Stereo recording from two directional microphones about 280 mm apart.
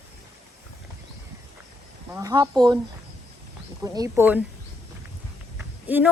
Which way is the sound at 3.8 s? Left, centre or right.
Centre.